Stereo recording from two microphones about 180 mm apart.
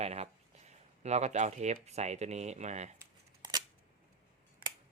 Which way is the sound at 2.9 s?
20° right (ahead or behind).